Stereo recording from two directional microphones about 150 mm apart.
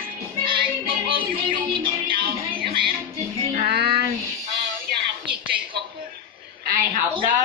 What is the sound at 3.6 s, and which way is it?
Child singing, 90° right.